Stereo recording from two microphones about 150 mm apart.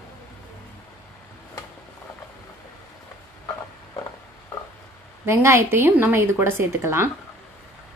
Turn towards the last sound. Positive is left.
turn(degrees=-15)  # may be behind; listen again after turning